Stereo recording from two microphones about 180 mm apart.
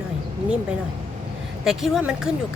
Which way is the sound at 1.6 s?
Centre (ahead or behind).